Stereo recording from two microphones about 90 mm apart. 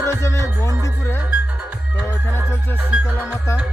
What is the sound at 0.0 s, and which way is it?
Music, 35° left (ahead or behind).